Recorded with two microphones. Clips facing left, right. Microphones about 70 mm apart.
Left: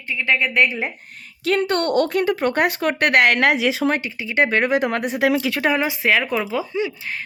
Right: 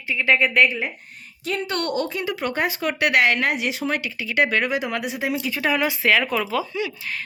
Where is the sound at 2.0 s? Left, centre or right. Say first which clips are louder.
Left 6 dB; left.